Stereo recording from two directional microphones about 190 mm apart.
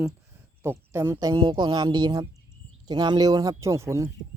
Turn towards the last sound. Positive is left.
turn(degrees=-15)  # may be behind; listen again after turning